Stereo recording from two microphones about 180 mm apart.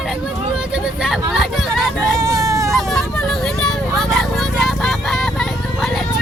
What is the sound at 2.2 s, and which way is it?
Hubbub, 20° right (ahead or behind).